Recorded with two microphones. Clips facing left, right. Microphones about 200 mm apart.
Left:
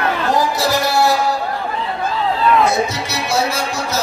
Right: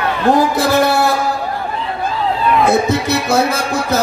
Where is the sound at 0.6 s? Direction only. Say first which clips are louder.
Right 3 dB; 55° right (ahead or behind).